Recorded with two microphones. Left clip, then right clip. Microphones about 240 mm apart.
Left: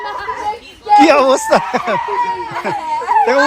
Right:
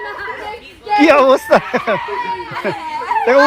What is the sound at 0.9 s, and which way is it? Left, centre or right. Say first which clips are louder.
Speech: left 1 dB; centre.